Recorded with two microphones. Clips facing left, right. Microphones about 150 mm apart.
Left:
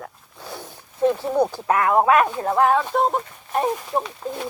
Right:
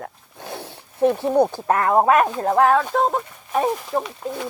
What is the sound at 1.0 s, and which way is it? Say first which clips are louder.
Speech: right 2 dB; 20° right (ahead or behind).